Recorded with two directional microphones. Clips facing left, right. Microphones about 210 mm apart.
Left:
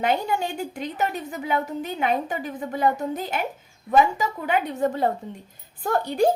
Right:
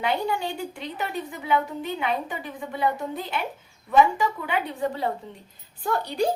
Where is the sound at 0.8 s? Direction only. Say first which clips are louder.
Left 3 dB; 45° left (ahead or behind).